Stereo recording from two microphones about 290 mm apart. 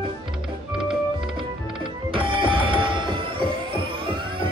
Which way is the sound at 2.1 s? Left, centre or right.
Centre.